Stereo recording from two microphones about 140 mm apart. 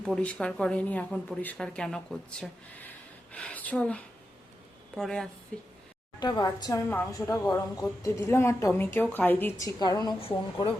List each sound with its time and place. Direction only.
0.0 s a woman's voice: 5° left (ahead or behind)
6.1 s speech: 30° left (ahead or behind)
10.2 s speech: 40° left (ahead or behind)